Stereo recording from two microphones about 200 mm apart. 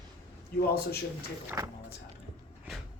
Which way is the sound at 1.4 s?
15° right (ahead or behind).